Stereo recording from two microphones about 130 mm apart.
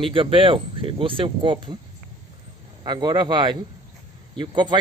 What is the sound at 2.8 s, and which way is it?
Speech, 35° right (ahead or behind).